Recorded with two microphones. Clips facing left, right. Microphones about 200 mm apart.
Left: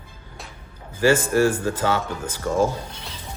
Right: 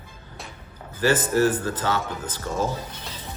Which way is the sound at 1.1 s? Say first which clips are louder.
Left 1 dB; 10° left (ahead or behind).